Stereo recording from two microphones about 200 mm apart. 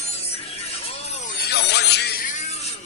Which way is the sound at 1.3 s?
55° left (ahead or behind).